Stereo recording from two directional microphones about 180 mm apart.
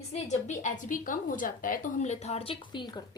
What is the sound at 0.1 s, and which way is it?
A woman's voice, 40° left (ahead or behind).